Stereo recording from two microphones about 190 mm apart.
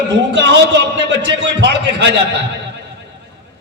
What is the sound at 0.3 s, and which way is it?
A man's voice, 65° right (ahead or behind).